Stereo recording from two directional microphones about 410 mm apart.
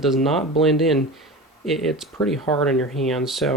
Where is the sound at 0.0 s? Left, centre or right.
Centre.